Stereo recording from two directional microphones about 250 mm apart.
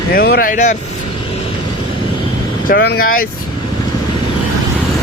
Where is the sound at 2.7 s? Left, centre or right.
Left.